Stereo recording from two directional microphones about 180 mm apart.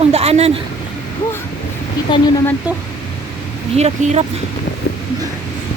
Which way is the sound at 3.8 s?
40° right (ahead or behind).